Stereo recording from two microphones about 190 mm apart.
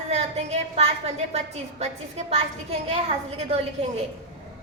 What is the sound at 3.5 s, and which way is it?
Speech, 30° right (ahead or behind).